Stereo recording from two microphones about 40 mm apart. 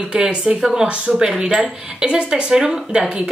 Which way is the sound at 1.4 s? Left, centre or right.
Centre.